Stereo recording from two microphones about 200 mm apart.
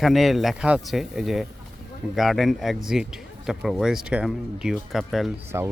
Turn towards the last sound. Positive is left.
turn(degrees=-15)  # may be behind; listen again after turning